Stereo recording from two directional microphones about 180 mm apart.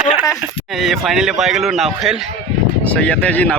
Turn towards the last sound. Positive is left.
turn(degrees=5)  # may be behind; listen again after turning